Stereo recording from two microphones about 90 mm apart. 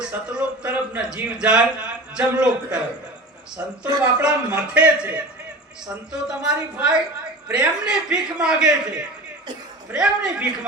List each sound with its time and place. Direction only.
0.1 s a man's voice: 15° right (ahead or behind)
4.0 s a man's voice: 10° right (ahead or behind)